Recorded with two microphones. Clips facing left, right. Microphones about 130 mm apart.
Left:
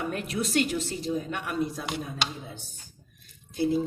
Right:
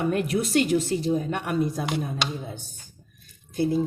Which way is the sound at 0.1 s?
40° right (ahead or behind).